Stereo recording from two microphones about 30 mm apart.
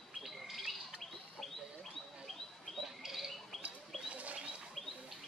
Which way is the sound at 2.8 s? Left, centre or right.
Centre.